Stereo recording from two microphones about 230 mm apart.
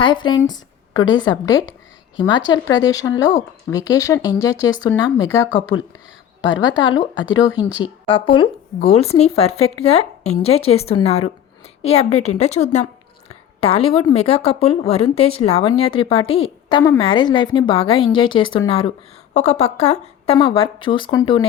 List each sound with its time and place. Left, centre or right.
0.0 s a woman's voice: centre
16.2 s a woman's voice: left
17.0 s a woman's voice: centre